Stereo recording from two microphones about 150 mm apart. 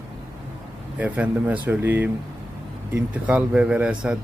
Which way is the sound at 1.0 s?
10° right (ahead or behind).